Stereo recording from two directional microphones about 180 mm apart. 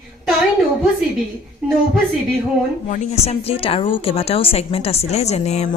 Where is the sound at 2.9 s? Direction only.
35° left (ahead or behind).